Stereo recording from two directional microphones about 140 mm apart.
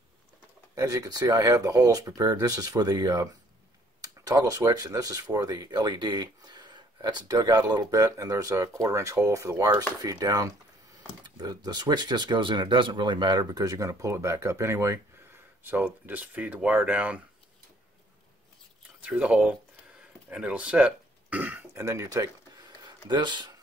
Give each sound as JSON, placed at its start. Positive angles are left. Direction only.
{"t": 0.7, "sound": "speech", "side_deg": -25}
{"t": 18.9, "sound": "speech", "side_deg": -10}